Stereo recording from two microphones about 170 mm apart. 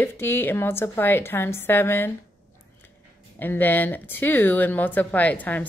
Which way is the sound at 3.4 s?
10° left (ahead or behind).